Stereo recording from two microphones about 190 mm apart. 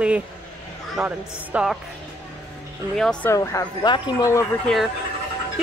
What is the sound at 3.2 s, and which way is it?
Speech, 15° left (ahead or behind).